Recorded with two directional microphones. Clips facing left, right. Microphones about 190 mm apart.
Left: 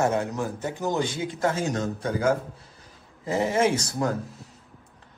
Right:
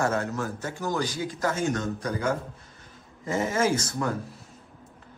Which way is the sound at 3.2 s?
30° left (ahead or behind).